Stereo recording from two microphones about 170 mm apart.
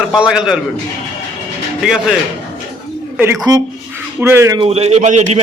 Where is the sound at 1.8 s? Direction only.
Centre (ahead or behind).